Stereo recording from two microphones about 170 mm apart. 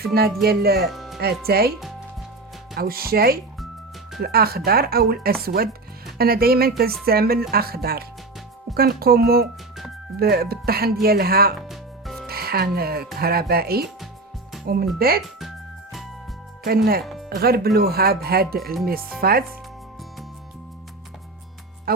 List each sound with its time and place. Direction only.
0.0 s speech: 65° right (ahead or behind)
0.9 s music: centre (ahead or behind)
1.2 s speech: 65° right (ahead or behind)
2.7 s speech: 60° right (ahead or behind)
11.7 s music: centre (ahead or behind)
12.3 s speech: 65° right (ahead or behind)
14.9 s speech: 60° right (ahead or behind)
15.4 s music: centre (ahead or behind)
16.6 s speech: 65° right (ahead or behind)
21.9 s speech: 65° right (ahead or behind)